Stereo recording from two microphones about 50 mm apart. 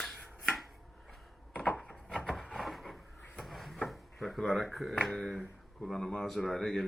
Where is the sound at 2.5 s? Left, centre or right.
Centre.